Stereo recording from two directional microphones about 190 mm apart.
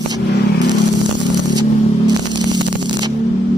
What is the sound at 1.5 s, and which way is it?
Zipper, 20° right (ahead or behind).